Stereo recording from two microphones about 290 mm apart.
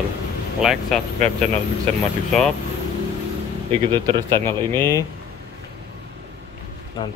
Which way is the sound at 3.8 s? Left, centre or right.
Centre.